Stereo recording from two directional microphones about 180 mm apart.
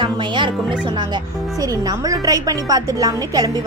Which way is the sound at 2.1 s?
20° right (ahead or behind).